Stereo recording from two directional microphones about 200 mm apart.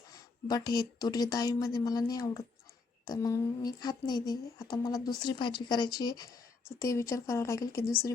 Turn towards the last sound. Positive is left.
turn(degrees=15)  # may be behind; listen again after turning